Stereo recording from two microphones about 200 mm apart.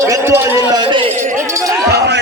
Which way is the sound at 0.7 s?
25° right (ahead or behind).